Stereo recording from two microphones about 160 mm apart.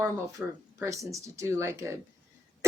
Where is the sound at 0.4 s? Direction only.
10° right (ahead or behind).